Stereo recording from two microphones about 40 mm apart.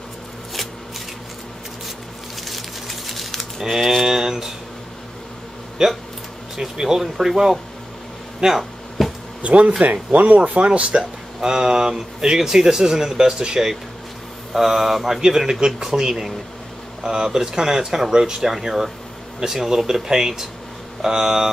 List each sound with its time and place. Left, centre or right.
2.4 s crumpling: centre
3.6 s speech: centre
4.0 s a sound: centre
6.5 s speech: centre
9.0 s a sound: centre
9.4 s speech: right
11.0 s speech: centre
14.5 s speech: centre